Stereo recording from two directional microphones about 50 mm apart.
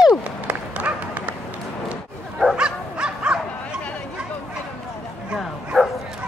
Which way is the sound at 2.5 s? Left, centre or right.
Right.